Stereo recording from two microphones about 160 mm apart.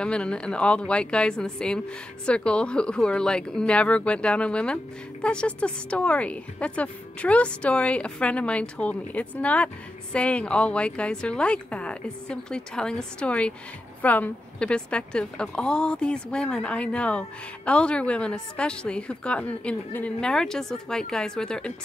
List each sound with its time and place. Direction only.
0.0 s a woman's voice: 5° left (ahead or behind)